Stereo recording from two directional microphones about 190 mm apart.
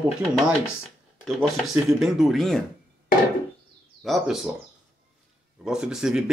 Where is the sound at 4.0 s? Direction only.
Centre (ahead or behind).